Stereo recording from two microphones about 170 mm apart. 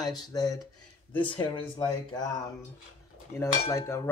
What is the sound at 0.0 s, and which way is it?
Speech, 25° left (ahead or behind).